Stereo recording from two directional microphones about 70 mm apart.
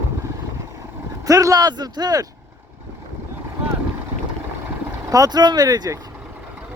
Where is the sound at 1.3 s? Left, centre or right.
Right.